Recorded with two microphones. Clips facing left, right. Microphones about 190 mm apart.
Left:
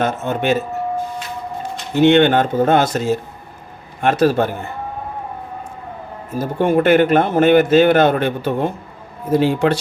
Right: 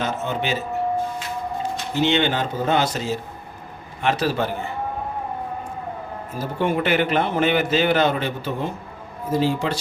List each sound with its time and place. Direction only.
0.0 s a man's voice: 55° left (ahead or behind)
2.0 s a man's voice: 55° left (ahead or behind)
6.4 s a man's voice: 45° left (ahead or behind); by 9.7 s 65° left (ahead or behind)